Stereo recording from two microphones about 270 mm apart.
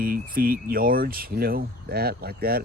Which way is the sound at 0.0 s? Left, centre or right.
Right.